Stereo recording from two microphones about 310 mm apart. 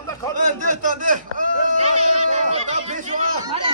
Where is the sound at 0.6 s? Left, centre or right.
Right.